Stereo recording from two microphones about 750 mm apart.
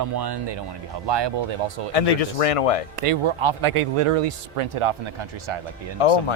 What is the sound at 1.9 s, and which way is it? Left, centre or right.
Speech, left.